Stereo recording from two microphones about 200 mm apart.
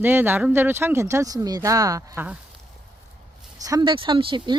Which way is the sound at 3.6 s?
20° right (ahead or behind).